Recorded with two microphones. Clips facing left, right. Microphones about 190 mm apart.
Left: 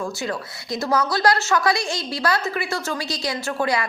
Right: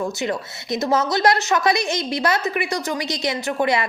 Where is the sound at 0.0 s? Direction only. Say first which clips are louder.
Right 3 dB; 20° right (ahead or behind).